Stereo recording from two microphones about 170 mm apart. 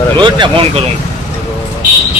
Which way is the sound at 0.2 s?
30° right (ahead or behind).